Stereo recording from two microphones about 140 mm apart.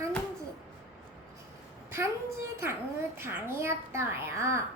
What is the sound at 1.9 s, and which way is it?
A woman's voice, 20° right (ahead or behind).